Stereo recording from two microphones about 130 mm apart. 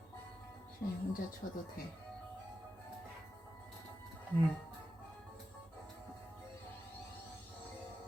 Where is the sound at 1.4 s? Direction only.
90° left.